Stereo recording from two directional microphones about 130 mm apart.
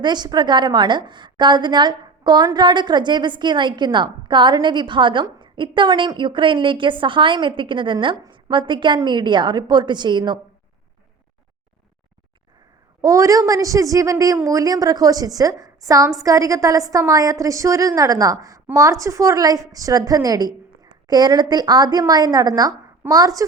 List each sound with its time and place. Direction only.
0.0 s a woman's voice: 35° right (ahead or behind)
13.0 s a woman's voice: 25° right (ahead or behind)